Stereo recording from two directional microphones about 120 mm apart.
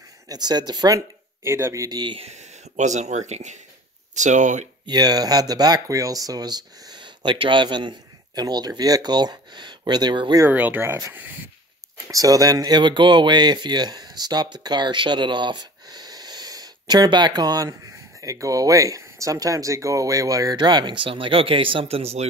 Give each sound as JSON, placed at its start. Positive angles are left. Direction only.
{"t": 0.3, "sound": "speech", "side_deg": -35}
{"t": 2.1, "sound": "speech", "side_deg": -70}
{"t": 4.1, "sound": "speech", "side_deg": -85}
{"t": 4.8, "sound": "speech", "side_deg": -35}
{"t": 10.4, "sound": "speech", "side_deg": -15}
{"t": 12.1, "sound": "speech", "side_deg": -30}